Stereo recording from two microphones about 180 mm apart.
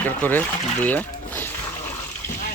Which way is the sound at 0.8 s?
10° left (ahead or behind).